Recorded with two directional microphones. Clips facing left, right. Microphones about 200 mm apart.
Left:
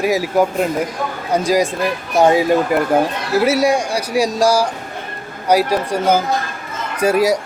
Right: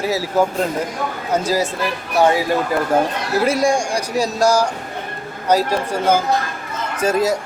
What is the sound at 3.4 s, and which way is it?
Speech, 5° left (ahead or behind).